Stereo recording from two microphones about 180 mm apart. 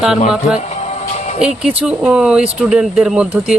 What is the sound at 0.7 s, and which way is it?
Music, 40° left (ahead or behind).